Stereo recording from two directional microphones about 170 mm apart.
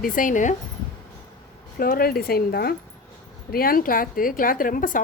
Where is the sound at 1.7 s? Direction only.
60° left (ahead or behind).